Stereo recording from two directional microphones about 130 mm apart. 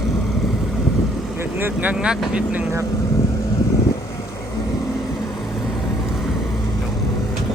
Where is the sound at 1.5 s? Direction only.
15° right (ahead or behind).